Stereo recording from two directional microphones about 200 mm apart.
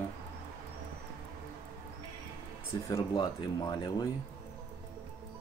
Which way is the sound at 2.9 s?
20° left (ahead or behind).